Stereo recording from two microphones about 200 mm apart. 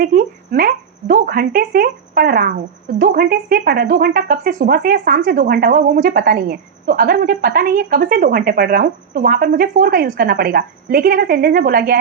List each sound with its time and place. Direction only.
0.0 s speech: 45° right (ahead or behind)